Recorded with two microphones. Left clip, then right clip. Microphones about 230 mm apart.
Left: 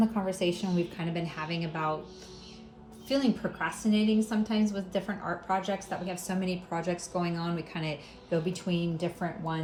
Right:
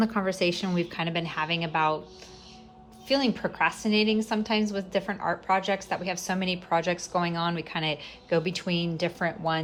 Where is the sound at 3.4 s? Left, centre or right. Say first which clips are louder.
Right 4 dB; right.